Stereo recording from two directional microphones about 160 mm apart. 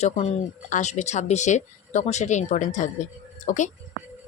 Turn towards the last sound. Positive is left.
turn(degrees=50)  # may be behind; listen again after turning